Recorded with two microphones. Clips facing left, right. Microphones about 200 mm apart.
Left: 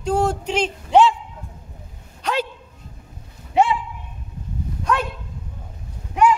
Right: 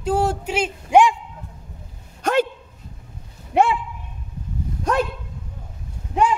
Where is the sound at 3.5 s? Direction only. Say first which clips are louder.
Even; 60° right (ahead or behind).